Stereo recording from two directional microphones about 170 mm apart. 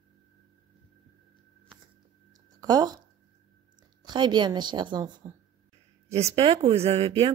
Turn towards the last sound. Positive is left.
turn(degrees=-35)  # may be behind; listen again after turning